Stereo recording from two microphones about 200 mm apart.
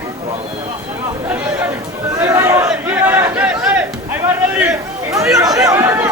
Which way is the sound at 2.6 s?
10° right (ahead or behind).